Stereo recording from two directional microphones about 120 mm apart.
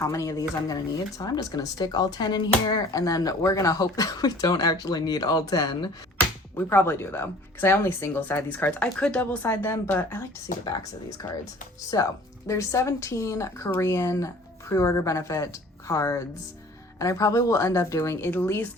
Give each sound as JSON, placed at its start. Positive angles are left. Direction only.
{"t": 0.0, "sound": "speech", "side_deg": 25}
{"t": 6.6, "sound": "speech", "side_deg": 20}
{"t": 11.9, "sound": "speech", "side_deg": 30}